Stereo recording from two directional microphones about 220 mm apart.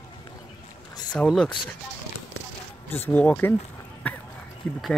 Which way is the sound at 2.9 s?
10° left (ahead or behind).